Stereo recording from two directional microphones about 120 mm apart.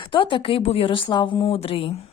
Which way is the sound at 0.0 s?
45° left (ahead or behind).